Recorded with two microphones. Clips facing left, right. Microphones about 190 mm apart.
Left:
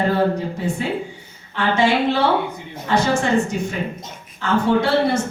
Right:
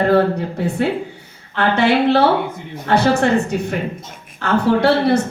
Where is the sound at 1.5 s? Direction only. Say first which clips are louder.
Right 3 dB; 60° right (ahead or behind).